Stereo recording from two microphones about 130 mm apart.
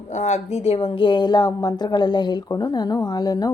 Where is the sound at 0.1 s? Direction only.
60° left (ahead or behind).